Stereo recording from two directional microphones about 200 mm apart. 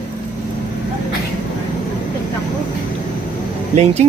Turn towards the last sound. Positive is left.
turn(degrees=-35)  # may be behind; listen again after turning